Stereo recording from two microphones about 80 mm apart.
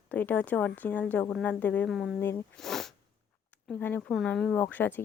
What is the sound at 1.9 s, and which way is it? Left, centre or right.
Speech, centre.